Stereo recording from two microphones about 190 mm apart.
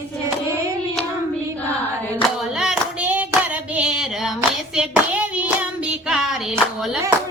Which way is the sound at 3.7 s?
5° right (ahead or behind).